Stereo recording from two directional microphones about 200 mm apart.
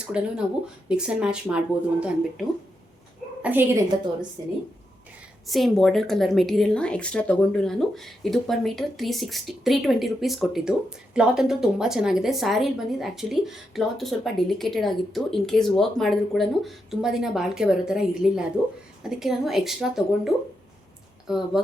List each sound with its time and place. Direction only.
0.0 s a woman's voice: 5° right (ahead or behind)
5.5 s speech: centre (ahead or behind)